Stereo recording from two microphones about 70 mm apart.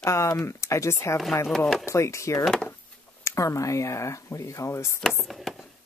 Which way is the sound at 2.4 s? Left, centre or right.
Centre.